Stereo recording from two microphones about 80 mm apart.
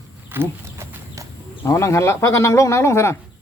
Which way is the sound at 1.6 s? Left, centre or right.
Left.